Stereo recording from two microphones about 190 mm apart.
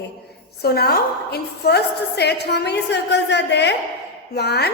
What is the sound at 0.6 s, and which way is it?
A woman's voice, 55° left (ahead or behind).